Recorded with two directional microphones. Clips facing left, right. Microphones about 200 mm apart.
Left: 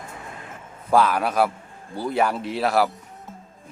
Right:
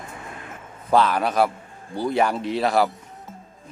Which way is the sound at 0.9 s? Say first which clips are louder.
Even; 5° left (ahead or behind).